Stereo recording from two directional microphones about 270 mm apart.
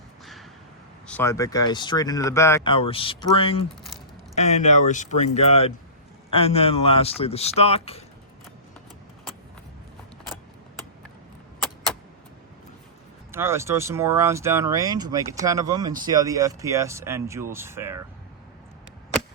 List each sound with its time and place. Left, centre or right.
1.0 s speech: centre
13.3 s speech: centre